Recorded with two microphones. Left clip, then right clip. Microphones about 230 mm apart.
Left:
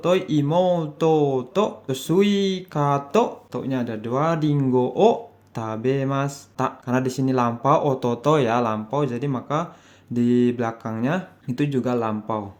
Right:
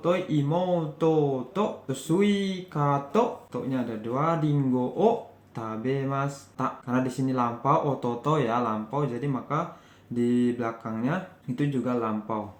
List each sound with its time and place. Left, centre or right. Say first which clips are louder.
0.0 s speech: left 5 dB; left